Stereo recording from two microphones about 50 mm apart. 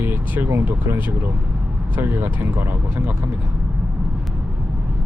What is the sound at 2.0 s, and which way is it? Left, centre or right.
Speech, right.